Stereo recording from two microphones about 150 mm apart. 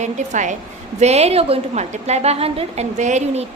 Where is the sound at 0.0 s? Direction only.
55° right (ahead or behind).